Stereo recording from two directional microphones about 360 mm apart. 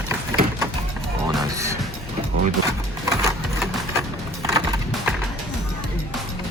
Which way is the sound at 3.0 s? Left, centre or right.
Centre.